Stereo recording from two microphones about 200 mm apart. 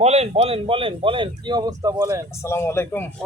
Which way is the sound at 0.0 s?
30° right (ahead or behind).